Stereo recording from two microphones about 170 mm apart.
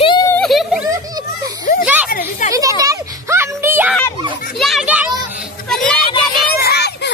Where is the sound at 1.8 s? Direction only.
10° right (ahead or behind).